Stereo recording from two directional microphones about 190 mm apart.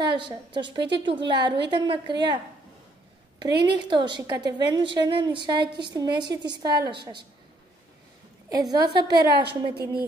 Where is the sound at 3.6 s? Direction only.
25° right (ahead or behind).